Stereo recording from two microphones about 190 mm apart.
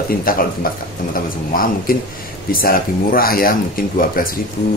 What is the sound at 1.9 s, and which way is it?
A man's voice, 50° left (ahead or behind).